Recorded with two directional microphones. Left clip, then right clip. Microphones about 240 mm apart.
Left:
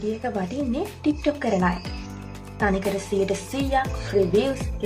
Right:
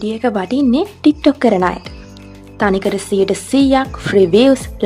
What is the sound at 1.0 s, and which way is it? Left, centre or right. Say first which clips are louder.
Speech: right 12 dB; right.